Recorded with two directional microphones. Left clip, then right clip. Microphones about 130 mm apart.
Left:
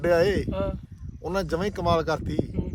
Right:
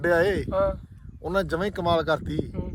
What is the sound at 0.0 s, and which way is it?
Speech, 15° left (ahead or behind).